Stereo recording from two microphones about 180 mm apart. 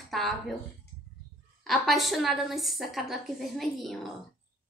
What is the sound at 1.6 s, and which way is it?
A woman's voice, centre (ahead or behind).